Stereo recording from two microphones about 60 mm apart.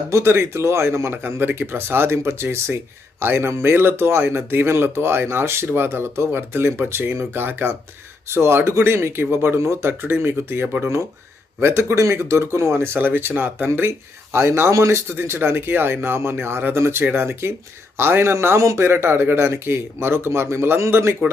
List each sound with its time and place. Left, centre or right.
0.1 s speech: right
14.3 s speech: right
18.9 s speech: right